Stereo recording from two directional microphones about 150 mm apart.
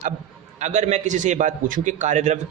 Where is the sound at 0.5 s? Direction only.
50° right (ahead or behind).